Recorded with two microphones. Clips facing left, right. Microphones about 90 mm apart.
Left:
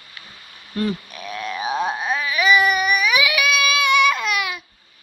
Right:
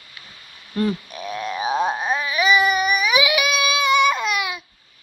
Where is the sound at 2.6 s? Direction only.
30° right (ahead or behind).